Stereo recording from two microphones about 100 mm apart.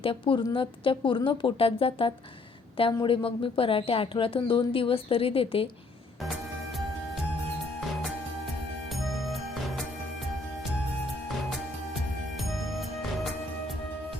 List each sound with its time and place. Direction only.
0.0 s a woman's voice: 65° left (ahead or behind)
11.3 s music: centre (ahead or behind)